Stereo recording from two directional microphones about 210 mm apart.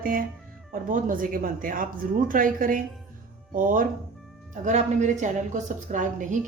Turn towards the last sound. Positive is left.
turn(degrees=-35)  # may be behind; listen again after turning